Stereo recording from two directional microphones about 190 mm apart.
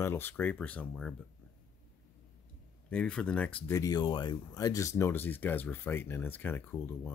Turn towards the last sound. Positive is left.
turn(degrees=10)  # may be behind; listen again after turning